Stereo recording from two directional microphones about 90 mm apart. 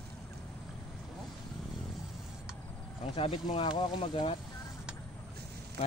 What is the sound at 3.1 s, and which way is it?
Speech, 80° left.